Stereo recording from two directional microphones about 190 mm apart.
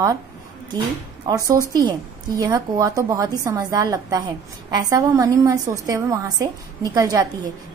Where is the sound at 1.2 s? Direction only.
20° right (ahead or behind).